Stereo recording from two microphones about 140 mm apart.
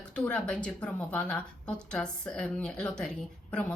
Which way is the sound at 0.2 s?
5° left (ahead or behind).